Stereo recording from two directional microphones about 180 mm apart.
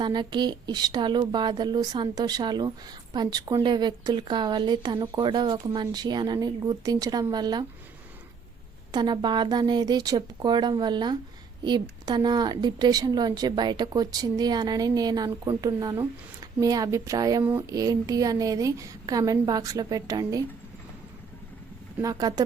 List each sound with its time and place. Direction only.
0.0 s a woman's voice: 25° right (ahead or behind)
8.9 s a woman's voice: 25° right (ahead or behind)
21.9 s a woman's voice: 20° right (ahead or behind)